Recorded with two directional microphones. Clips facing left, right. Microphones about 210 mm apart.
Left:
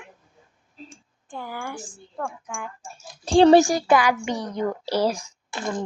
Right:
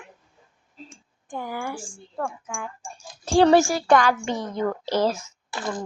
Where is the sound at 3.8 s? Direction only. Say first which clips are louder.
Right 1 dB; 10° left (ahead or behind).